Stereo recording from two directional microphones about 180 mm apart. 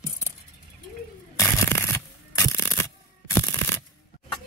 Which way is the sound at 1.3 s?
15° left (ahead or behind).